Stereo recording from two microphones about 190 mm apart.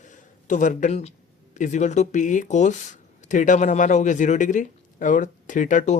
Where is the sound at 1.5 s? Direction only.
40° left (ahead or behind).